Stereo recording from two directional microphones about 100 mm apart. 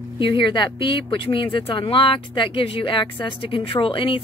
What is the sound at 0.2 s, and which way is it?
Speech, 55° left (ahead or behind).